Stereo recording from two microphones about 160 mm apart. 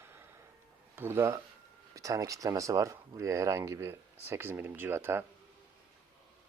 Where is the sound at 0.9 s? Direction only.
15° right (ahead or behind).